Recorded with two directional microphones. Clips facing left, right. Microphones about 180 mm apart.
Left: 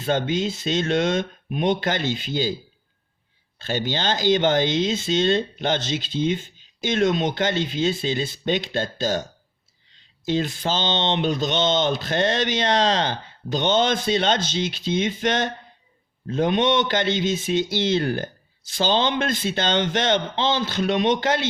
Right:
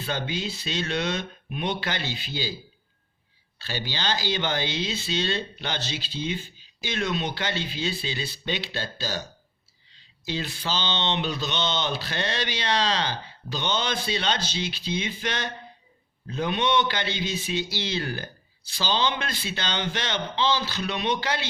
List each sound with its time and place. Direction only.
0.3 s speech: 45° left (ahead or behind)
3.6 s speech: 45° left (ahead or behind)